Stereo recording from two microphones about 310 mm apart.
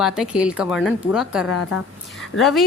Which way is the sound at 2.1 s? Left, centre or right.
Centre.